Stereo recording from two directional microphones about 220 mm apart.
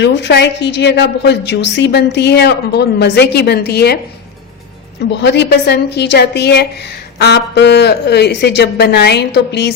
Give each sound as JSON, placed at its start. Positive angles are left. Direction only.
{"t": 0.0, "sound": "a woman's voice", "side_deg": 50}
{"t": 5.1, "sound": "a woman's voice", "side_deg": 50}